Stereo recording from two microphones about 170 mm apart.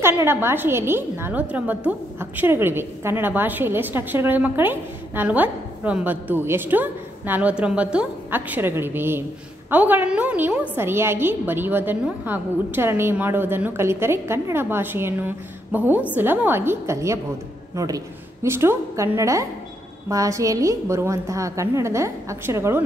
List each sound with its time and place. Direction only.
0.0 s a woman's voice: 15° right (ahead or behind)